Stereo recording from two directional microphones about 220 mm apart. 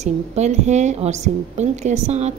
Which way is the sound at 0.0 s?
30° right (ahead or behind).